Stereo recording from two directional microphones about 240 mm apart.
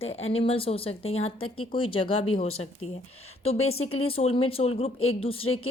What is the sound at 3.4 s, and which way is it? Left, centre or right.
A woman's voice, left.